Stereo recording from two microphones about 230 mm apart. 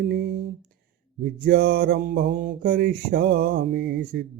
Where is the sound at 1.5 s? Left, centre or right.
Right.